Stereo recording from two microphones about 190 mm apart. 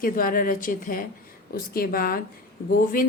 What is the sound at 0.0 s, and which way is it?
Speech, 50° left (ahead or behind).